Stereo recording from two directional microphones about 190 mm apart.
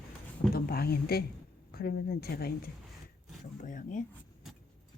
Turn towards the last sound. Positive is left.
turn(degrees=45)  # may be behind; listen again after turning